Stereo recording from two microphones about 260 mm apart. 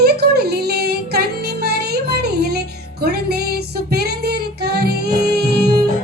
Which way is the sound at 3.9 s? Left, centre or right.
Right.